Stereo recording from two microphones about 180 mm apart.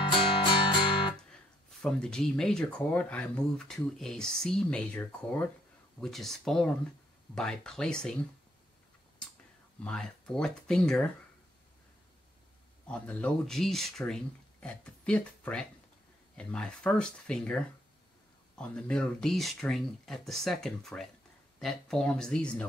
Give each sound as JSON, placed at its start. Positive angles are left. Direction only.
{"t": 0.1, "sound": "music", "side_deg": 25}
{"t": 1.8, "sound": "speech", "side_deg": 5}
{"t": 9.8, "sound": "speech", "side_deg": 5}
{"t": 12.8, "sound": "speech", "side_deg": 5}